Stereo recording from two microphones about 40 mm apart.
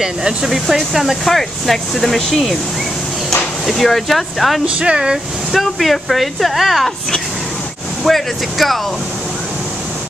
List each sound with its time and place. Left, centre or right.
0.0 s speech: centre
0.5 s speech: centre
1.2 s speech: centre
3.6 s speech: centre
4.7 s speech: right
5.5 s speech: centre
8.0 s speech: centre